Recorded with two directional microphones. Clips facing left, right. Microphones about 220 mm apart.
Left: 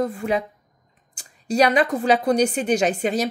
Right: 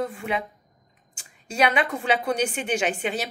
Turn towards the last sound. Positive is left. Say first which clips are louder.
# left 5 dB
turn(degrees=40)  # may be behind; listen again after turning